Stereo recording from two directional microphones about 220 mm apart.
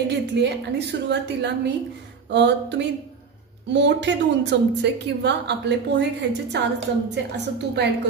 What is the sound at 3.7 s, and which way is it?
A woman's voice, 50° right (ahead or behind).